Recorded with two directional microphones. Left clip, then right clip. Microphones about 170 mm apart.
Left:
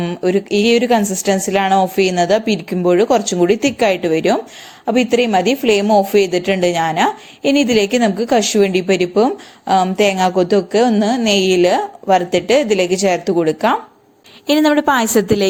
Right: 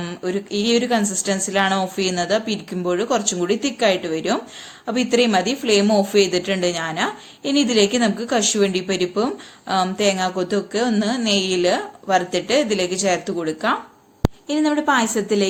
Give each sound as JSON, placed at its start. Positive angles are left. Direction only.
{"t": 0.0, "sound": "a woman's voice", "side_deg": 35}
{"t": 14.4, "sound": "a woman's voice", "side_deg": 55}